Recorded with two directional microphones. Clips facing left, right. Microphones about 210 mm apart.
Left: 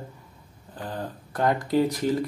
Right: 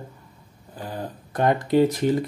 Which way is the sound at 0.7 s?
10° right (ahead or behind).